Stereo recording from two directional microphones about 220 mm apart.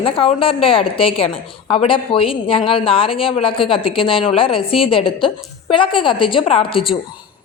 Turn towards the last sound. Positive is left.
turn(degrees=25)  # may be behind; listen again after turning